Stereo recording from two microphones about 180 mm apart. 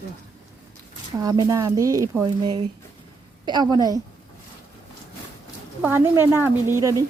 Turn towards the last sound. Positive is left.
turn(degrees=-20)  # may be behind; listen again after turning